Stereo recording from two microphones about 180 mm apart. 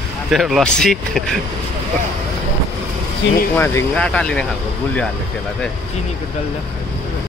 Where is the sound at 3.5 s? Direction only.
10° left (ahead or behind).